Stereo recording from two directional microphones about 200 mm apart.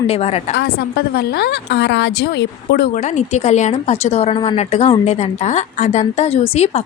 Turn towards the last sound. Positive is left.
turn(degrees=30)  # may be behind; listen again after turning